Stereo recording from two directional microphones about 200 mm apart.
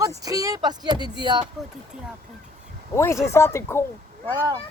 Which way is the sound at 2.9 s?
15° left (ahead or behind).